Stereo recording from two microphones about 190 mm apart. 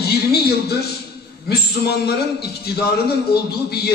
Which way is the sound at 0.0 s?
55° left (ahead or behind).